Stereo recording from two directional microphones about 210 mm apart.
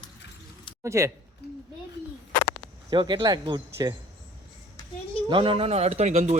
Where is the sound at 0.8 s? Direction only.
15° right (ahead or behind).